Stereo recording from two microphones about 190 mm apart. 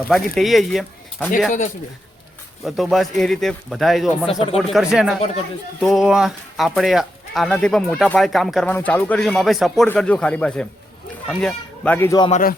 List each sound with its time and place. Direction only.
0.1 s speech: centre (ahead or behind)
2.6 s speech: centre (ahead or behind)
4.3 s speech: 30° left (ahead or behind)
4.5 s speech: centre (ahead or behind)
12.3 s speech: 50° left (ahead or behind)